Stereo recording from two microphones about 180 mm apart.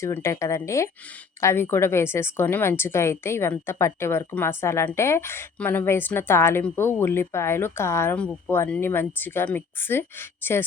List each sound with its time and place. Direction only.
0.0 s a woman's voice: 15° left (ahead or behind)